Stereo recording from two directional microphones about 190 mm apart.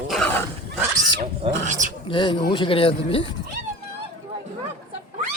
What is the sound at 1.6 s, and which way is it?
Speech, 40° right (ahead or behind).